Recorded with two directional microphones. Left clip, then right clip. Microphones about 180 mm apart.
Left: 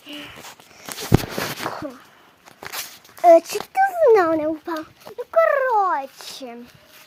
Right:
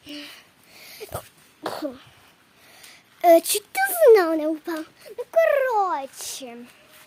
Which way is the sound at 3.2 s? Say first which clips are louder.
Left 3 dB; 15° right (ahead or behind).